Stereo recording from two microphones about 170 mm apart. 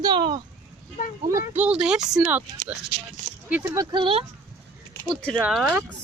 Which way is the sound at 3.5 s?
10° right (ahead or behind).